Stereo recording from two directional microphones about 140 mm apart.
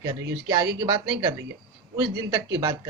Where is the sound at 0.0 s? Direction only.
30° right (ahead or behind).